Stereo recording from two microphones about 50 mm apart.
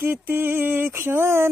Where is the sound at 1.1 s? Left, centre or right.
Right.